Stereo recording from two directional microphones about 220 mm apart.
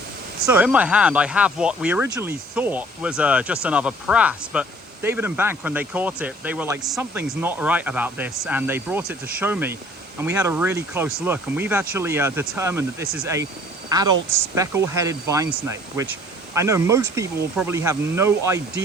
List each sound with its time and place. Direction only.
0.4 s speech: 5° right (ahead or behind)